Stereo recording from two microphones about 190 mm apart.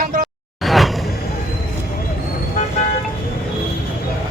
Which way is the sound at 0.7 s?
Centre (ahead or behind).